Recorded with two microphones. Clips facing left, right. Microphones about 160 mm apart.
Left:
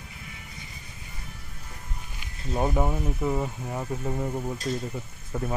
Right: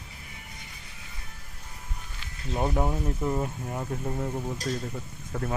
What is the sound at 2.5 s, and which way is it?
Speech, centre (ahead or behind).